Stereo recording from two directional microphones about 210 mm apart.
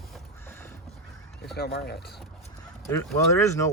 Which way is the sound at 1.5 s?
50° left (ahead or behind).